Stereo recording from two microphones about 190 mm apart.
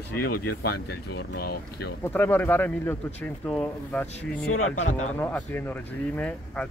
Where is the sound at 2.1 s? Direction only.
10° left (ahead or behind).